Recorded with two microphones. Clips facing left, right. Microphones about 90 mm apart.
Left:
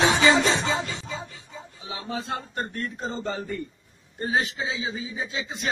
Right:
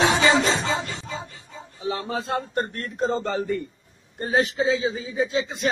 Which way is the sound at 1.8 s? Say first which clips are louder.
Right 6 dB; 45° right (ahead or behind).